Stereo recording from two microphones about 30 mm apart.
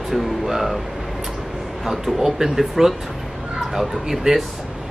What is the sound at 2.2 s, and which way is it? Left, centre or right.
Speech, centre.